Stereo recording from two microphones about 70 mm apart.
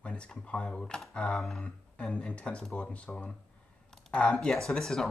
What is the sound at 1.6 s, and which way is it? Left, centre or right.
Speech, centre.